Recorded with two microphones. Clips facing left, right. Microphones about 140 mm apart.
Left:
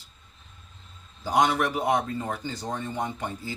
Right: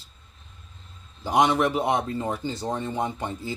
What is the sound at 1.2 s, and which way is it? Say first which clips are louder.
Speech: right 2 dB; 20° right (ahead or behind).